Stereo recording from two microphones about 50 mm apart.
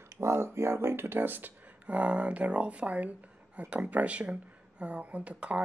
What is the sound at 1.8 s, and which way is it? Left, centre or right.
Speech, right.